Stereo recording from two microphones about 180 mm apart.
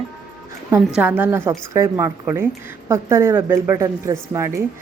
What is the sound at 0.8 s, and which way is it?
A woman's voice, 5° right (ahead or behind).